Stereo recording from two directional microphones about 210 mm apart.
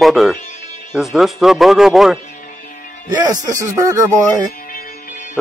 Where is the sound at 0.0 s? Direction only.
Centre (ahead or behind).